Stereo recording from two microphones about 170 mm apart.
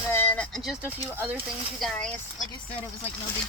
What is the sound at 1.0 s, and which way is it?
Speech, 15° right (ahead or behind).